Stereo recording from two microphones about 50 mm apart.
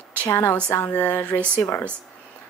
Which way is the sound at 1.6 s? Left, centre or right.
Left.